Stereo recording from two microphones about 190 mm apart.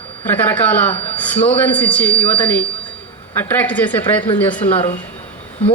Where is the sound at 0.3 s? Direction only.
10° left (ahead or behind).